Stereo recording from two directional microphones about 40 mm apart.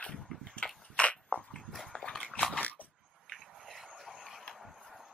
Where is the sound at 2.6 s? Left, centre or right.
Left.